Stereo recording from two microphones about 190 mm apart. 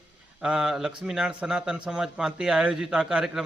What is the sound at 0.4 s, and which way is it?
A man's voice, 5° right (ahead or behind).